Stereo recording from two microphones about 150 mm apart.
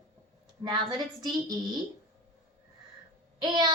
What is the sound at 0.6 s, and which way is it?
Speech, 25° right (ahead or behind).